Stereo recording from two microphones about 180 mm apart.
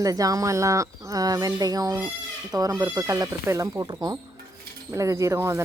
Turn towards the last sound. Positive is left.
turn(degrees=-15)  # may be behind; listen again after turning